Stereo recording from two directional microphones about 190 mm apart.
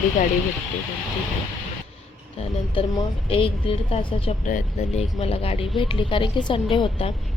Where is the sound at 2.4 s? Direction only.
30° left (ahead or behind).